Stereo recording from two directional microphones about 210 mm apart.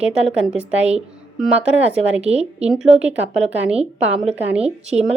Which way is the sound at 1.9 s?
30° right (ahead or behind).